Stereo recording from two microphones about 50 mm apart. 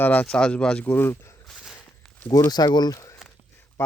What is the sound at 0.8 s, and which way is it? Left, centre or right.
Speech, left.